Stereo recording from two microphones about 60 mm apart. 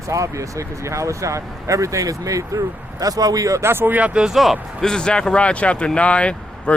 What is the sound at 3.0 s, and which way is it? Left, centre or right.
Speech, right.